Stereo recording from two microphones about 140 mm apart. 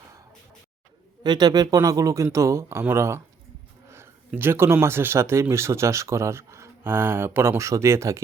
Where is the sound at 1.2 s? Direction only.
30° right (ahead or behind).